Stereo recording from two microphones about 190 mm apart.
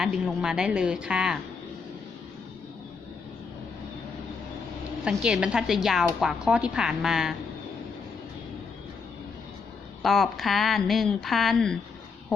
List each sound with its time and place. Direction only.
0.0 s speech: 5° right (ahead or behind)
5.0 s speech: 5° right (ahead or behind)
10.0 s speech: centre (ahead or behind)